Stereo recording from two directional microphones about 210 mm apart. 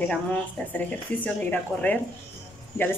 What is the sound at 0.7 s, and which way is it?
Speech, 5° left (ahead or behind).